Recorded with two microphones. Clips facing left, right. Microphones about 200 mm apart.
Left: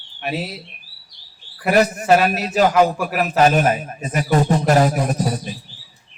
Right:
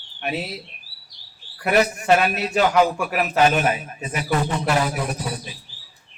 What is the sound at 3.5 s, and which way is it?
A man's voice, 40° left (ahead or behind).